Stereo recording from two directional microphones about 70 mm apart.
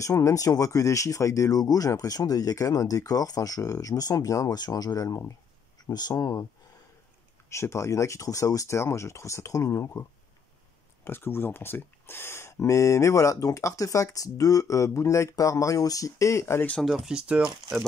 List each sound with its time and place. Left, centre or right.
0.0 s speech: left
5.9 s speech: left
7.4 s speech: left
11.1 s speech: left
16.8 s speech: centre